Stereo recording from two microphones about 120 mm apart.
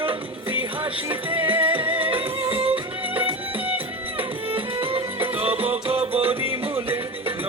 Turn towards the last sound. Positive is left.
turn(degrees=-50)  # may be behind; listen again after turning